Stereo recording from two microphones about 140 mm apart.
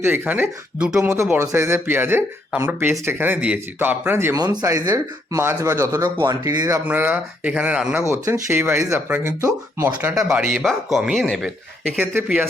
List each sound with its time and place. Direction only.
0.0 s speech: 15° right (ahead or behind)
6.8 s speech: 10° right (ahead or behind)
8.1 s speech: 20° right (ahead or behind)
10.1 s speech: 5° right (ahead or behind)
11.9 s speech: 10° right (ahead or behind)